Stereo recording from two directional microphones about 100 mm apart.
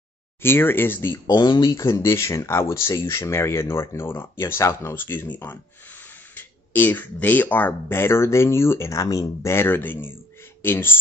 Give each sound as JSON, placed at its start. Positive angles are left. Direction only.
{"t": 0.4, "sound": "speech", "side_deg": 20}
{"t": 1.2, "sound": "speech", "side_deg": 45}
{"t": 1.7, "sound": "speech", "side_deg": 30}